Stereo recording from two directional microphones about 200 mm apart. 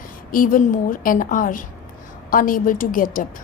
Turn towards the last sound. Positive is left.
turn(degrees=45)  # may be behind; listen again after turning